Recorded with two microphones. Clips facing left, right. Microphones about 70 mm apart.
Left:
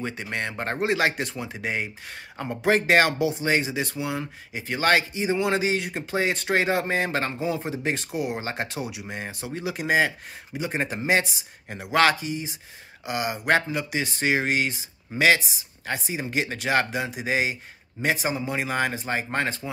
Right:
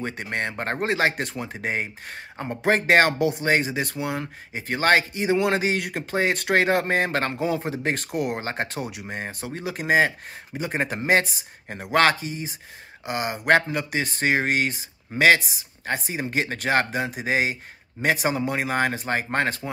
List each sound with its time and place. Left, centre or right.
0.0 s speech: right
2.3 s speech: right
2.7 s speech: right